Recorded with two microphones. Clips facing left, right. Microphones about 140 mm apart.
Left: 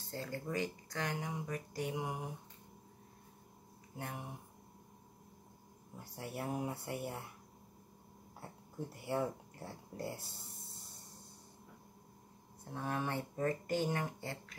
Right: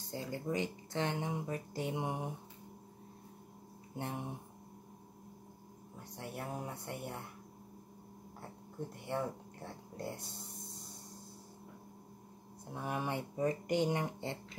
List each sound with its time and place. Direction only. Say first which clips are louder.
0.1 s speech: right 2 dB; 20° right (ahead or behind)
3.9 s speech: right 4 dB; 25° right (ahead or behind)
6.1 s speech: left 2 dB; centre (ahead or behind)
8.9 s speech: left 2 dB; 5° left (ahead or behind)
12.7 s speech: even; 15° right (ahead or behind)